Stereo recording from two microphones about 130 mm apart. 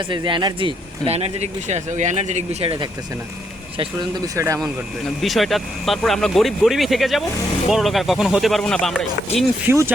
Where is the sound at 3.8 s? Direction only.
35° right (ahead or behind).